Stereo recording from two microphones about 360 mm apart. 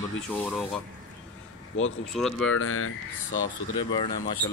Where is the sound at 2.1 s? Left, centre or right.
Centre.